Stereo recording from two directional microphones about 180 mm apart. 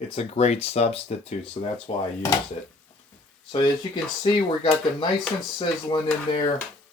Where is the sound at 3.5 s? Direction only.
25° left (ahead or behind).